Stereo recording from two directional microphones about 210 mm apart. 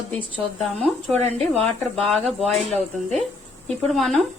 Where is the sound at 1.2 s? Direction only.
30° right (ahead or behind).